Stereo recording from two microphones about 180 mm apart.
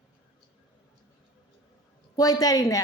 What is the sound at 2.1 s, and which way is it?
Speech, 20° left (ahead or behind).